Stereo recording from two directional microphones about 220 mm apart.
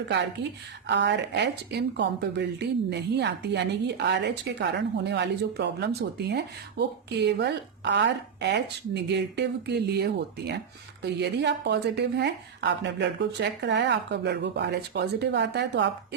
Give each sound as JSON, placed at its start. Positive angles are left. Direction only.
{"t": 0.9, "sound": "a woman's voice", "side_deg": -50}